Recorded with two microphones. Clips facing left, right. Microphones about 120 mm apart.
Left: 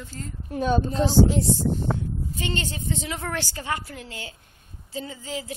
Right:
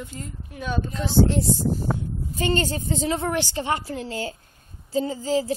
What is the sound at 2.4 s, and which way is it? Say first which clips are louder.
Speech: right 8 dB; 40° right (ahead or behind).